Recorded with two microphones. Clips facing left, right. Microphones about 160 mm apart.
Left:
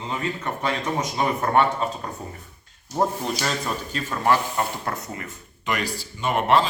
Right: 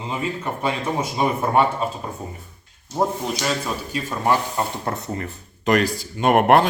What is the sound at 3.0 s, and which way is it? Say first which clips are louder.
A man's voice: right 1 dB; 5° right (ahead or behind).